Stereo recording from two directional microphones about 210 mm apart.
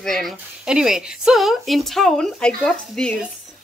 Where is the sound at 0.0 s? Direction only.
Centre (ahead or behind).